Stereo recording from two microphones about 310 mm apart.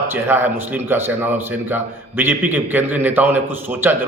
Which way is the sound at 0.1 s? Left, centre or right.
Centre.